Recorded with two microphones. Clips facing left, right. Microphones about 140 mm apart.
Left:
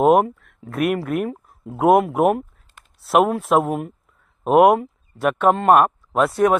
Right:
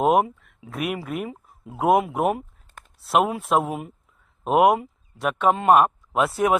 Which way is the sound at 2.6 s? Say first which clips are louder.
Right 4 dB; 50° right (ahead or behind).